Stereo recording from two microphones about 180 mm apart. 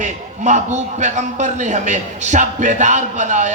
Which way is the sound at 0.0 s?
40° right (ahead or behind).